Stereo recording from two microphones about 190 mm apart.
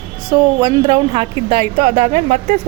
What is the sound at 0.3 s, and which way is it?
Speech, 25° right (ahead or behind).